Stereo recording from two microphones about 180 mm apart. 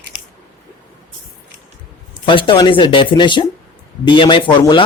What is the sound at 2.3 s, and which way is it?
Speech, 25° left (ahead or behind).